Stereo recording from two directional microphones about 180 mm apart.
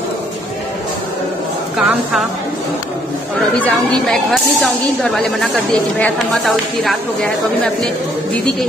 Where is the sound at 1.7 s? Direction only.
5° right (ahead or behind).